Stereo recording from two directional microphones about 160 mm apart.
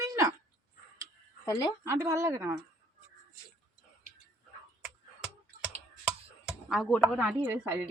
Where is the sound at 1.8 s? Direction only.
20° right (ahead or behind).